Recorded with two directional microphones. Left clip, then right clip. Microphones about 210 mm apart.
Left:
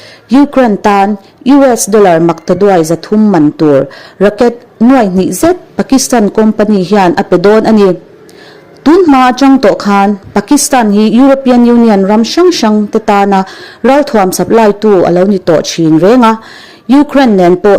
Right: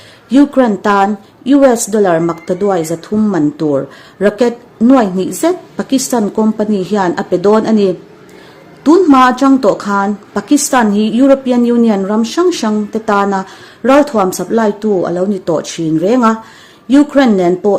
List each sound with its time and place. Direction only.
0.3 s speech: 30° left (ahead or behind)